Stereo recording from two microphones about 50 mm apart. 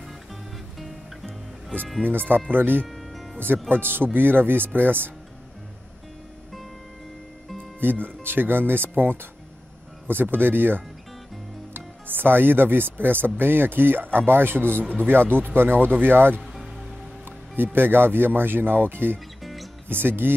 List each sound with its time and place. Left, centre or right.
0.0 s music: centre
2.0 s speech: right
2.9 s music: centre
3.3 s speech: right
7.8 s speech: right
17.7 s speech: right
19.1 s music: centre
19.9 s speech: right